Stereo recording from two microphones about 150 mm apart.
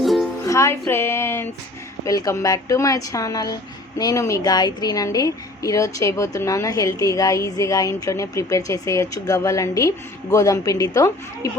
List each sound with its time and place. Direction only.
0.0 s music: centre (ahead or behind)
0.4 s a woman's voice: 20° left (ahead or behind)